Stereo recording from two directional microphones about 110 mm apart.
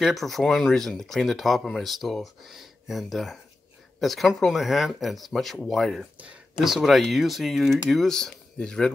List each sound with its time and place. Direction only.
0.0 s speech: centre (ahead or behind)